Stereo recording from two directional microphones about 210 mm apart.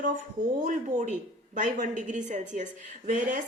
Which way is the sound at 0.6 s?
35° right (ahead or behind).